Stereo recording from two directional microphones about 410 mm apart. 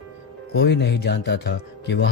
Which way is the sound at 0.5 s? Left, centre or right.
Left.